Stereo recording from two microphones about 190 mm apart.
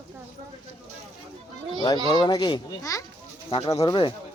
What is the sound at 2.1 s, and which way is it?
Speech, 20° left (ahead or behind).